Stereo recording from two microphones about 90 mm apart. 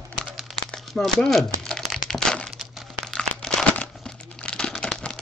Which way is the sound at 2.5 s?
5° right (ahead or behind).